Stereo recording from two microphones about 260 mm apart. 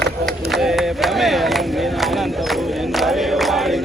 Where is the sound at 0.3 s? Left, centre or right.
Centre.